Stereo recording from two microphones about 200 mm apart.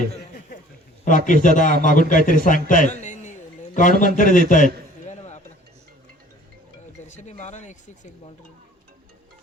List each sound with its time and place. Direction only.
1.0 s a man's voice: 40° left (ahead or behind)
1.7 s a man's voice: 50° right (ahead or behind)
2.0 s a man's voice: 40° left (ahead or behind)
7.2 s speech: 35° left (ahead or behind)